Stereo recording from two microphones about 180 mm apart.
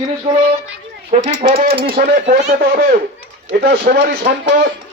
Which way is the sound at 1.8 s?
50° right (ahead or behind).